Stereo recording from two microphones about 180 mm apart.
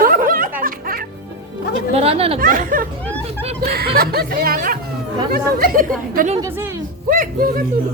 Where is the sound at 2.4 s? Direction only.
50° right (ahead or behind).